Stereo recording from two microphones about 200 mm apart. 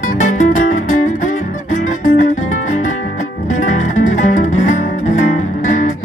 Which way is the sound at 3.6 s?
40° left (ahead or behind).